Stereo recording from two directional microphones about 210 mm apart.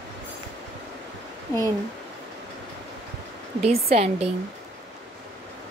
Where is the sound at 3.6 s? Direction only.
30° right (ahead or behind).